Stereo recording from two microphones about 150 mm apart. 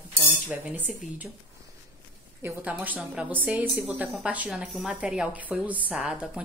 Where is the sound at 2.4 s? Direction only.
10° right (ahead or behind).